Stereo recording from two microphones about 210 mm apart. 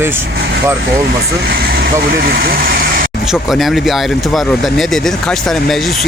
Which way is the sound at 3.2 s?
Centre (ahead or behind).